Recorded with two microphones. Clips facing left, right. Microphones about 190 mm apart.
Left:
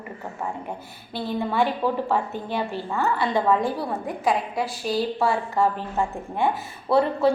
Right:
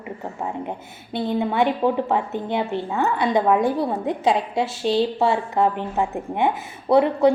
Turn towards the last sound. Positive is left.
turn(degrees=-20)  # may be behind; listen again after turning